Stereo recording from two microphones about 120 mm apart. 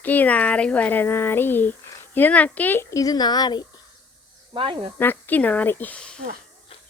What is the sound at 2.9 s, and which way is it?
Speech, 30° left (ahead or behind).